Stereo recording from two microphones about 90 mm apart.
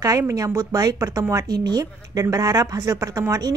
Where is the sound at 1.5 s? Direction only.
50° right (ahead or behind).